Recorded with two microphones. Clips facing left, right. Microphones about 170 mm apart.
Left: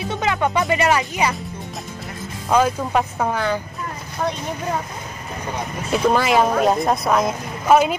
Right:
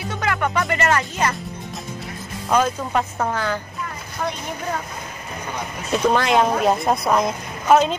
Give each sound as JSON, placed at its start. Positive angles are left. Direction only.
{"t": 0.1, "sound": "speech", "side_deg": 20}
{"t": 2.5, "sound": "speech", "side_deg": 5}
{"t": 5.9, "sound": "a woman's voice", "side_deg": 5}